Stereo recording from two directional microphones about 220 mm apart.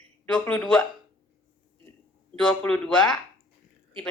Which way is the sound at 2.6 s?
5° left (ahead or behind).